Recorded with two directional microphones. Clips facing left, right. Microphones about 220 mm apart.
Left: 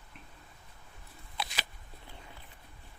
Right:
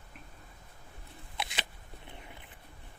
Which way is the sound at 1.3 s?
25° right (ahead or behind).